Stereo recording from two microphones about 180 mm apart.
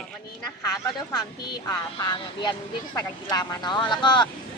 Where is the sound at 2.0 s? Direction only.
25° left (ahead or behind).